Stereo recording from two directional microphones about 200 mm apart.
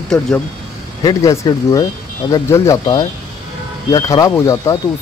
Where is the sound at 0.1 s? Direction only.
5° left (ahead or behind).